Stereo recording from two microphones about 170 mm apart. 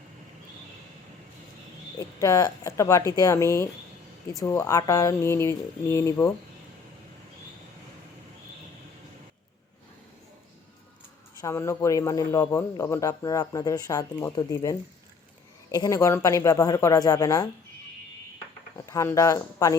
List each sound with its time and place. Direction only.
2.0 s speech: 20° left (ahead or behind)
11.3 s speech: 15° left (ahead or behind)
18.9 s speech: 20° left (ahead or behind)